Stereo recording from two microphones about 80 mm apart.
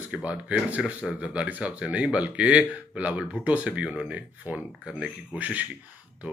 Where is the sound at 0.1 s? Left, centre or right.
Centre.